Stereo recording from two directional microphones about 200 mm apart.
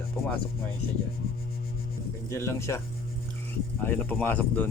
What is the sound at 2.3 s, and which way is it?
Speech, 15° left (ahead or behind).